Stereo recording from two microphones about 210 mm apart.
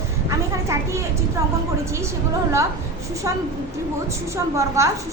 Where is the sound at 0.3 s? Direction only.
15° right (ahead or behind).